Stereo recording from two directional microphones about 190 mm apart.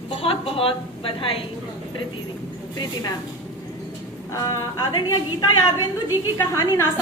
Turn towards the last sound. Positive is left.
turn(degrees=15)  # may be behind; listen again after turning